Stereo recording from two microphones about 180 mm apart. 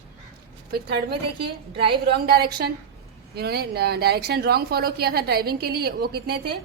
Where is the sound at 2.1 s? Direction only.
60° right (ahead or behind).